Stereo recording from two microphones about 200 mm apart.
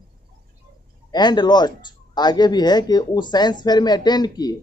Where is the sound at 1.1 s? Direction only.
20° left (ahead or behind).